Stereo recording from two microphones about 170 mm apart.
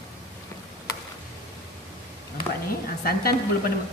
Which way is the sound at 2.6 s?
60° left (ahead or behind).